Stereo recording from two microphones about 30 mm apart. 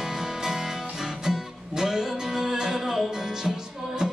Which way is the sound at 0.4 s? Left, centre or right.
Centre.